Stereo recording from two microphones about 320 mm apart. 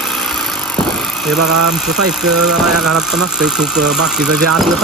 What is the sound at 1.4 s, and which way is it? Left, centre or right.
Speech, right.